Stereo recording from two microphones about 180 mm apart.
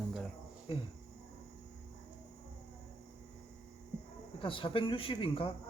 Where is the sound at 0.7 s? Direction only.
30° left (ahead or behind).